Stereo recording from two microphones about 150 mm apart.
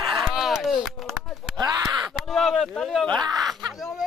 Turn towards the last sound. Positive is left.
turn(degrees=0)  # may be behind; listen again after turning